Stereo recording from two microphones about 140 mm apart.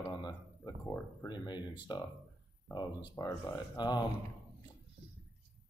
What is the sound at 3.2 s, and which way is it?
Speech, 25° left (ahead or behind).